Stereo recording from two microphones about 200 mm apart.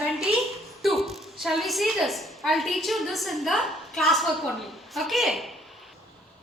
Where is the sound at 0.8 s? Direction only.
Centre (ahead or behind).